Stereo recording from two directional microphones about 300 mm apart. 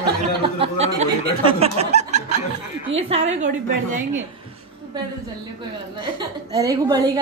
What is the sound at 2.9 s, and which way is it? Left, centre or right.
Speech, centre.